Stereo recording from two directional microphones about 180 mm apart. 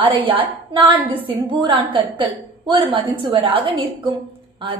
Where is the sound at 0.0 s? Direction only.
30° right (ahead or behind).